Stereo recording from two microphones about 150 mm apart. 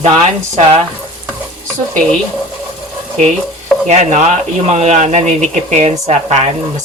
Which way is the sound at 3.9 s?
50° right (ahead or behind).